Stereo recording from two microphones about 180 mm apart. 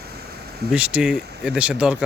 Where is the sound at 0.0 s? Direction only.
60° right (ahead or behind).